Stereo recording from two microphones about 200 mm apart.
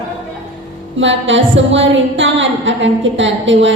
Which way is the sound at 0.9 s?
70° right (ahead or behind).